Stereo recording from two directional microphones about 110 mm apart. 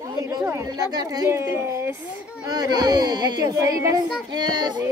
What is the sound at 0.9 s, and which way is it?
Speech, 35° right (ahead or behind).